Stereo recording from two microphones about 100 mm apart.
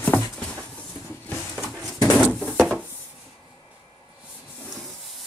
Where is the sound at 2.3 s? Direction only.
5° left (ahead or behind).